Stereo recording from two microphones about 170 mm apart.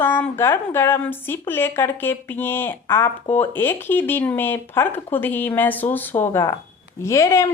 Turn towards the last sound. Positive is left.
turn(degrees=15)  # may be behind; listen again after turning